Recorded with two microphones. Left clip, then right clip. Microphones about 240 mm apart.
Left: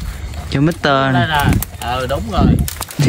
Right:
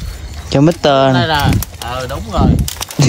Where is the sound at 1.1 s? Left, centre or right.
Centre.